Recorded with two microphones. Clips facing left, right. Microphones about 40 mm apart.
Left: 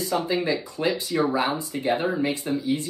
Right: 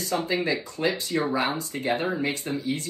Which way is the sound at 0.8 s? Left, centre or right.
Centre.